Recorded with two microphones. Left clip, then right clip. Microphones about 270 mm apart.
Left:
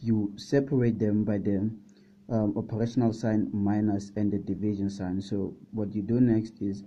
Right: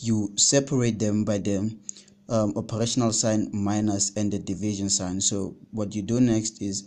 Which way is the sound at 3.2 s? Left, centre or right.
Centre.